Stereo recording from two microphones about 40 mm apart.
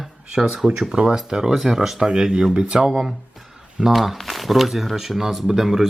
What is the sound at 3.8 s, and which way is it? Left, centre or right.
Speech, centre.